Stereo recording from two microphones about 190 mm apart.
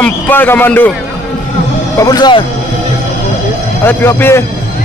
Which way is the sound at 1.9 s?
20° left (ahead or behind).